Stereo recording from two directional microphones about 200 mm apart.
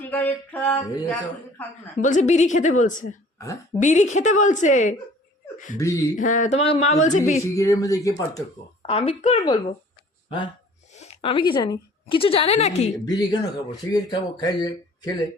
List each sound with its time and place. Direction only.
0.1 s speech: 10° left (ahead or behind)
2.0 s speech: 40° left (ahead or behind)
3.3 s a woman's voice: 15° left (ahead or behind)
3.8 s speech: 35° left (ahead or behind)
5.8 s speech: 15° left (ahead or behind)
6.1 s speech: 40° left (ahead or behind)
7.4 s speech: 15° left (ahead or behind)
8.9 s a woman's voice: 30° left (ahead or behind)
13.1 s speech: 20° left (ahead or behind)